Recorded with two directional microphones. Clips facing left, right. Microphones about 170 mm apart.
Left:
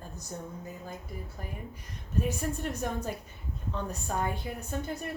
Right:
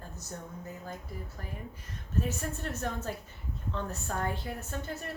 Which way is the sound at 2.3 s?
15° left (ahead or behind).